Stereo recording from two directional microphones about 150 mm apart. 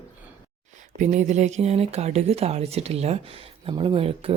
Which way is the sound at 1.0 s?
55° right (ahead or behind).